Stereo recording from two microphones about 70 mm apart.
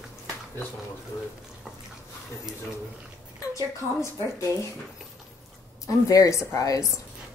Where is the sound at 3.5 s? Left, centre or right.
Left.